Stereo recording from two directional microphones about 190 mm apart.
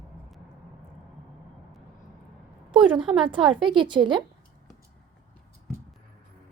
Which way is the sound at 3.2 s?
25° right (ahead or behind).